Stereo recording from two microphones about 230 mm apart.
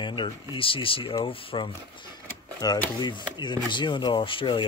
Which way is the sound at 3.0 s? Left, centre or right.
Centre.